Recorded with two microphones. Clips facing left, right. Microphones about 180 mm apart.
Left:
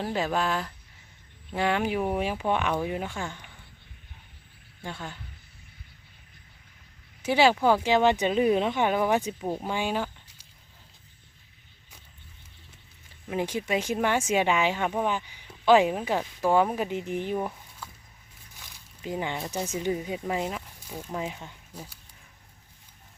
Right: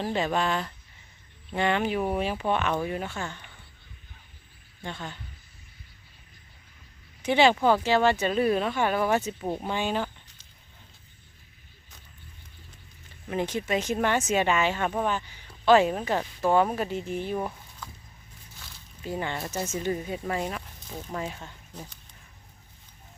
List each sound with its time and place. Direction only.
0.0 s speech: 5° left (ahead or behind)
4.8 s speech: 10° left (ahead or behind)
7.2 s speech: 5° left (ahead or behind)
13.2 s speech: 10° left (ahead or behind)
18.6 s a sound: 15° left (ahead or behind)
19.7 s speech: 10° left (ahead or behind)